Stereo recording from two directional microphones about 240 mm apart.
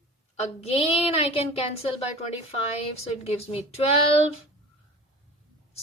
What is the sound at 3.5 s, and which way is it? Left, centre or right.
Speech, left.